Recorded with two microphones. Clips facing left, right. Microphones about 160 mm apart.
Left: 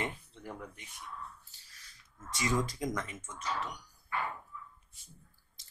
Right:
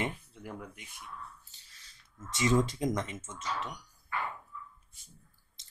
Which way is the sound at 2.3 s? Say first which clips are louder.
Right 5 dB; 25° right (ahead or behind).